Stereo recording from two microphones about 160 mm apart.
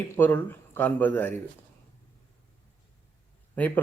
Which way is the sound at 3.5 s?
10° left (ahead or behind).